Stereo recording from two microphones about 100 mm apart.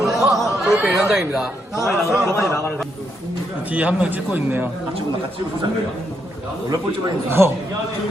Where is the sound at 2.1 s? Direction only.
30° right (ahead or behind).